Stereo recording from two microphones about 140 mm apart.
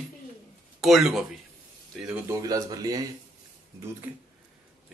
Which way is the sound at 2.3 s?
25° right (ahead or behind).